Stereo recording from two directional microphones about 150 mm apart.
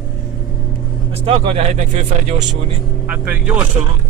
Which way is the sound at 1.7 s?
55° right (ahead or behind).